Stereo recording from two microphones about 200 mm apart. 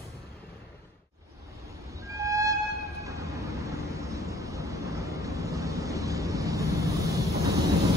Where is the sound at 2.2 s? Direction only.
15° right (ahead or behind).